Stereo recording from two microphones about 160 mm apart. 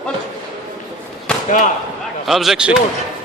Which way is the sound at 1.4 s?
50° left (ahead or behind).